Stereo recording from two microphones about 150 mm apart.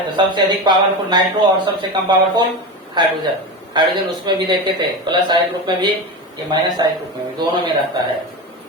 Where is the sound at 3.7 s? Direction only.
30° right (ahead or behind).